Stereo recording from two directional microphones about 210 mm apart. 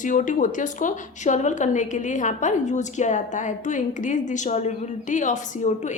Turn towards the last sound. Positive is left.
turn(degrees=35)  # may be behind; listen again after turning